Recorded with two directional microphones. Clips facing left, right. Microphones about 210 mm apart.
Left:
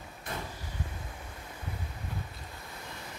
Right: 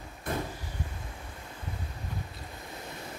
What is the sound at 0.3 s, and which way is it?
Vehicle, 55° right (ahead or behind).